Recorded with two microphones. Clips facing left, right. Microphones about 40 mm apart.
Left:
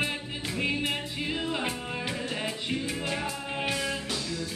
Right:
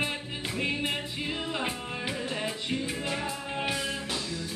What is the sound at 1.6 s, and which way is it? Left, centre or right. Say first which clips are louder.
Music: left 1 dB; centre.